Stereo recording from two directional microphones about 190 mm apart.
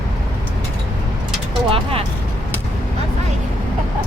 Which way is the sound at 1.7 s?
30° right (ahead or behind).